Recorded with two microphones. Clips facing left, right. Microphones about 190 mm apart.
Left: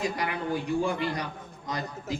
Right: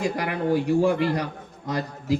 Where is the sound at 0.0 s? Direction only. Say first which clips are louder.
Right 5 dB; 60° right (ahead or behind).